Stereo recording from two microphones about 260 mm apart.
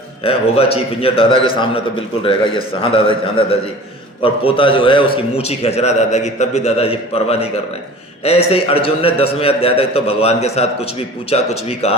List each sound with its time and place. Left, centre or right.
0.3 s a man's voice: left